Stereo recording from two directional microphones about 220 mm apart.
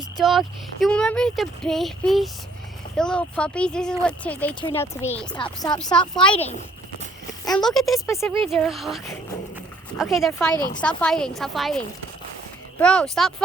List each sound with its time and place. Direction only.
0.2 s speech: centre (ahead or behind)
7.5 s speech: centre (ahead or behind)
8.0 s speech: 15° left (ahead or behind)
8.4 s speech: centre (ahead or behind)
12.8 s speech: 5° left (ahead or behind)